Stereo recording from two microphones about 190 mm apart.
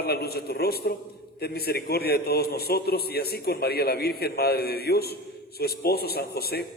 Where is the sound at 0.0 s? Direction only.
55° left (ahead or behind).